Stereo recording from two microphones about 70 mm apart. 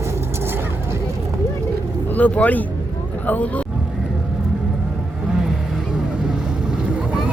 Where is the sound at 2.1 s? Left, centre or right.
Left.